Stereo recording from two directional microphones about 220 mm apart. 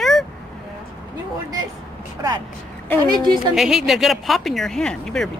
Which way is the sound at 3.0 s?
20° right (ahead or behind).